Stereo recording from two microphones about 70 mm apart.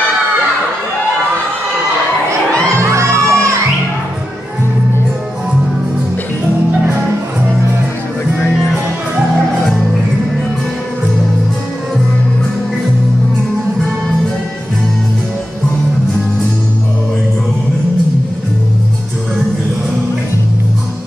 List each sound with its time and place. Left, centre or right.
2.8 s music: right
8.4 s music: left